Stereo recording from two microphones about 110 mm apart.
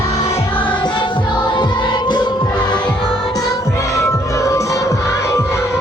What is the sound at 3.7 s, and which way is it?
Music, 25° left (ahead or behind).